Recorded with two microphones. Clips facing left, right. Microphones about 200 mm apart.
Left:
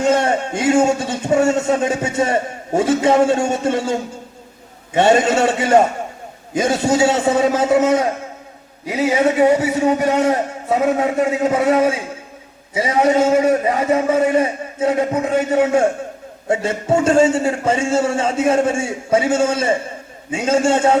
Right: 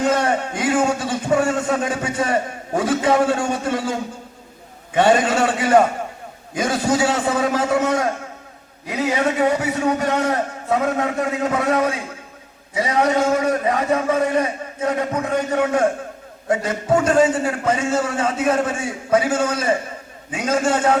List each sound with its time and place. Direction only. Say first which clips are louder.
0.0 s a man's voice: left 3 dB; 25° left (ahead or behind)
4.9 s a man's voice: left 2 dB; 25° left (ahead or behind)